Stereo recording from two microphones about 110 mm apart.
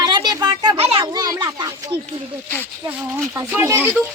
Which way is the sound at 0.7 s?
60° right (ahead or behind).